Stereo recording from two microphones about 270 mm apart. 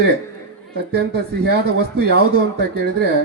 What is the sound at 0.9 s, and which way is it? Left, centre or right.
Speech, right.